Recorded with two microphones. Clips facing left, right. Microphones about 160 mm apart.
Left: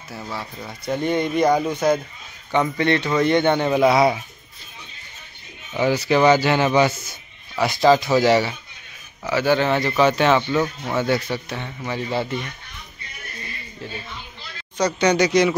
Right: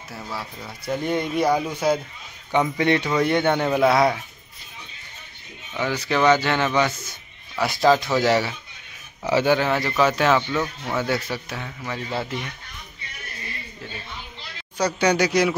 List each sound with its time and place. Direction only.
0.1 s speech: centre (ahead or behind)
5.8 s speech: 10° left (ahead or behind)
7.5 s speech: centre (ahead or behind)
9.2 s speech: 25° right (ahead or behind)
9.7 s speech: centre (ahead or behind)
10.6 s speech: 10° left (ahead or behind)
11.0 s speech: 5° right (ahead or behind)
14.8 s speech: 10° right (ahead or behind)